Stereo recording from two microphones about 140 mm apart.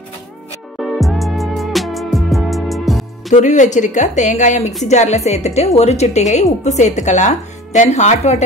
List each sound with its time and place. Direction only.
0.7 s music: centre (ahead or behind)
3.3 s a woman's voice: 60° left (ahead or behind)